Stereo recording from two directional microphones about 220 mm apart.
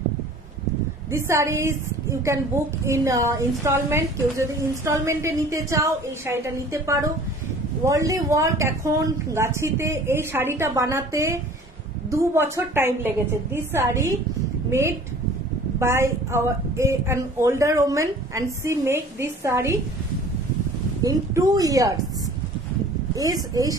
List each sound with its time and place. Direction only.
1.1 s a woman's voice: 10° right (ahead or behind)
21.0 s a woman's voice: 15° right (ahead or behind)
23.1 s a woman's voice: 15° right (ahead or behind)